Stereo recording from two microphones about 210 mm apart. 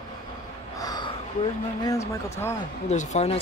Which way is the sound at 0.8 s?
20° left (ahead or behind).